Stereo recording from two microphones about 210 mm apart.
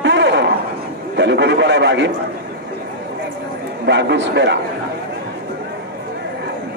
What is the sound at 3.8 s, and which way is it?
Speech, 55° right (ahead or behind).